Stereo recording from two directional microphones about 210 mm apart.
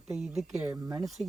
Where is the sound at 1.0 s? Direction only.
Centre (ahead or behind).